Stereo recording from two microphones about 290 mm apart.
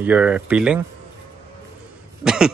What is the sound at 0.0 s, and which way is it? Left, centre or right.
Speech, centre.